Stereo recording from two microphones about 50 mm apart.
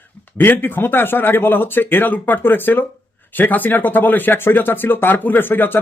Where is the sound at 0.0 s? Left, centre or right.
Left.